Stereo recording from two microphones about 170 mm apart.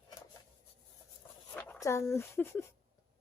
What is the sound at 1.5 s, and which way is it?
Speech, 10° left (ahead or behind).